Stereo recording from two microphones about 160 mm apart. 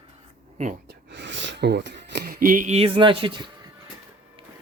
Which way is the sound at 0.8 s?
90° right.